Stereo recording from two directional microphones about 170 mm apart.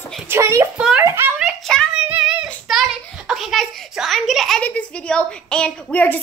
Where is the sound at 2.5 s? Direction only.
Centre (ahead or behind).